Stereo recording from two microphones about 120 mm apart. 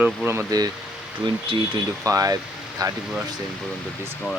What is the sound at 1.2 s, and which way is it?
Speech, 45° right (ahead or behind).